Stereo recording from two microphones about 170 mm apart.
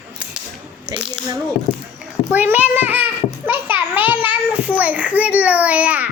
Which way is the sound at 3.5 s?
10° right (ahead or behind).